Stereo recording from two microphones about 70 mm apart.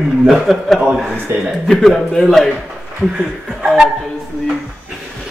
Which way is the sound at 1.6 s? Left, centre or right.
Centre.